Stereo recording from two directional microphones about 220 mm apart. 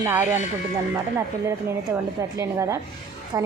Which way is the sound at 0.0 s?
10° right (ahead or behind).